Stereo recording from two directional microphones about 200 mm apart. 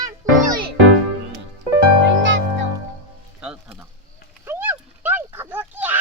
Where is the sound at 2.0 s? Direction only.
65° right (ahead or behind).